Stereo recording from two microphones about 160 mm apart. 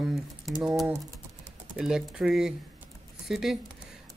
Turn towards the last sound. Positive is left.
turn(degrees=0)  # may be behind; listen again after turning